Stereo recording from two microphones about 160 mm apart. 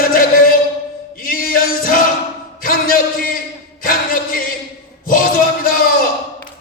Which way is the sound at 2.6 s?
60° left (ahead or behind).